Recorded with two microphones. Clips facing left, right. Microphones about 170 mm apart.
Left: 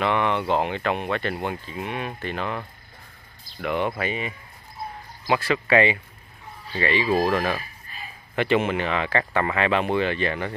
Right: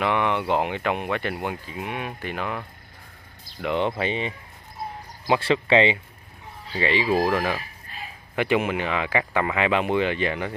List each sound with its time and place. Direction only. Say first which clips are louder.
0.0 s speech: even; 15° right (ahead or behind)
3.6 s speech: right 1 dB; 20° right (ahead or behind)